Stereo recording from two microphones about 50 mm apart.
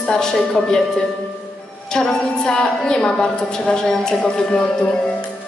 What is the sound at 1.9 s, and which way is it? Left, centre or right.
A woman's voice, centre.